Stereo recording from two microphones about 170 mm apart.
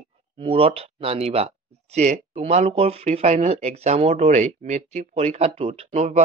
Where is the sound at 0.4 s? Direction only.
35° right (ahead or behind).